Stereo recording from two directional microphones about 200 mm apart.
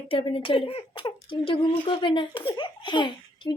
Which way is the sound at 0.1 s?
25° left (ahead or behind).